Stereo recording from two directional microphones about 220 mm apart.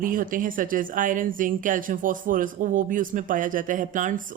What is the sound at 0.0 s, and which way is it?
Speech, 40° right (ahead or behind).